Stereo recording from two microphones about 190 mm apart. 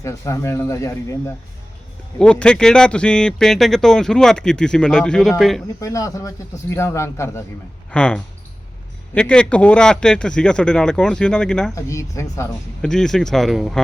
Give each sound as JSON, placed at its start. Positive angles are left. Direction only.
{"t": 0.0, "sound": "a man's voice", "side_deg": 15}
{"t": 2.1, "sound": "speech", "side_deg": 5}
{"t": 5.8, "sound": "a man's voice", "side_deg": 15}
{"t": 11.7, "sound": "a man's voice", "side_deg": 15}
{"t": 12.8, "sound": "speech", "side_deg": 5}